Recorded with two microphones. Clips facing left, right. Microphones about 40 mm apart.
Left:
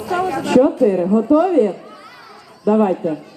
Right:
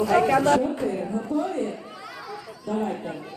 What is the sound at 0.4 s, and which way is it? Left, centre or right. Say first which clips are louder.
Speech: left 8 dB; left.